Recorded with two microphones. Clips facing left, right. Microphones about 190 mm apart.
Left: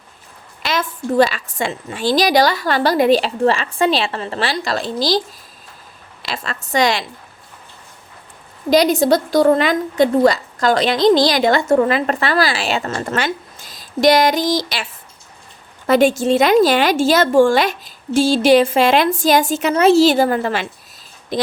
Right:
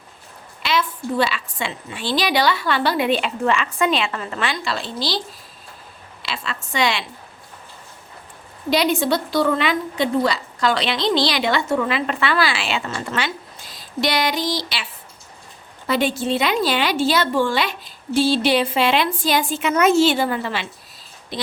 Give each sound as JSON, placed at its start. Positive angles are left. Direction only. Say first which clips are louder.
{"t": 0.6, "sound": "a woman's voice", "louder": "left 1 dB", "side_deg": 45}
{"t": 6.2, "sound": "a woman's voice", "louder": "left 3 dB", "side_deg": 45}
{"t": 8.7, "sound": "a woman's voice", "louder": "left 6 dB", "side_deg": 40}
{"t": 15.9, "sound": "a woman's voice", "louder": "left 7 dB", "side_deg": 45}